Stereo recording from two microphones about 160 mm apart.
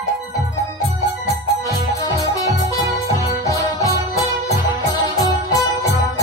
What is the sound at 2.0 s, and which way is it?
Music, 20° left (ahead or behind).